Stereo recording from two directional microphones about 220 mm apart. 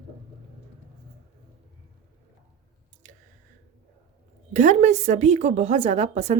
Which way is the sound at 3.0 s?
35° right (ahead or behind).